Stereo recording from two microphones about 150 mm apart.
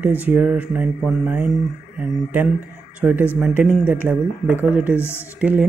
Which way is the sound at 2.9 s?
10° right (ahead or behind).